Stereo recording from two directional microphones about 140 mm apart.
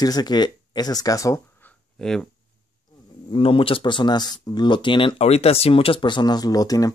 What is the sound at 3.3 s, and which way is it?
Speech, 40° left (ahead or behind).